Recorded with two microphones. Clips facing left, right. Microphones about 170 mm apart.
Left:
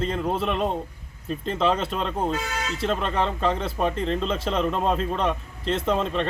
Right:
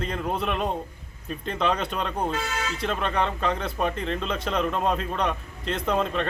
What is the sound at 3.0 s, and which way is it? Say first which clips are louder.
Speech: left 1 dB; 30° left (ahead or behind).